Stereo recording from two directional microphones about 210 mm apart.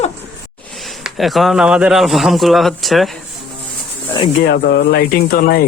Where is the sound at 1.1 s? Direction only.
Centre (ahead or behind).